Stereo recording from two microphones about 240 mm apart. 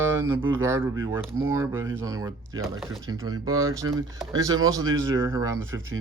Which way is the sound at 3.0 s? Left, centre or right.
Centre.